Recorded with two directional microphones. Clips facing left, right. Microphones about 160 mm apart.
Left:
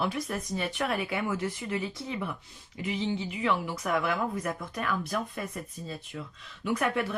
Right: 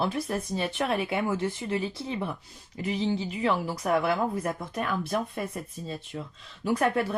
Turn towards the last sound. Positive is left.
turn(degrees=-35)  # may be behind; listen again after turning